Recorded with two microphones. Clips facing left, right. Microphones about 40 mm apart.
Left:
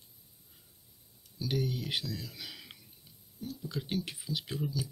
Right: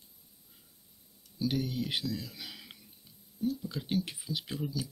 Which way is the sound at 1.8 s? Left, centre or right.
Centre.